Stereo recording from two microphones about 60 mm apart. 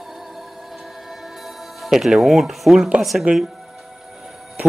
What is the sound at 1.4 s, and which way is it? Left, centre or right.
Speech, centre.